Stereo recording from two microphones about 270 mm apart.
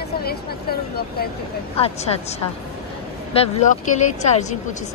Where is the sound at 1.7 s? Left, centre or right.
Left.